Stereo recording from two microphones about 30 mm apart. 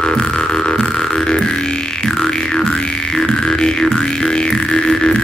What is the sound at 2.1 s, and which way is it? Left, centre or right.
Music, centre.